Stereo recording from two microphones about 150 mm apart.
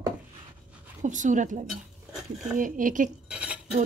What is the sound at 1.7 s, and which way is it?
Dishes, centre (ahead or behind).